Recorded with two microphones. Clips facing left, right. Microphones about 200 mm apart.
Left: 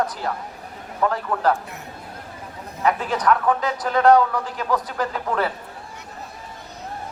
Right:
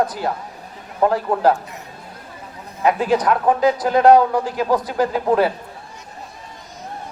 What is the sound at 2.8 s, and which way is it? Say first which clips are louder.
A man's voice: right 4 dB; 20° right (ahead or behind).